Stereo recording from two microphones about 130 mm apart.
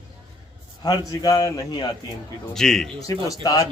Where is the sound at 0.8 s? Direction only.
30° left (ahead or behind).